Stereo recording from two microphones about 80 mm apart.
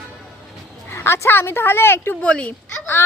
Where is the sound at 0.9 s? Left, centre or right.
Left.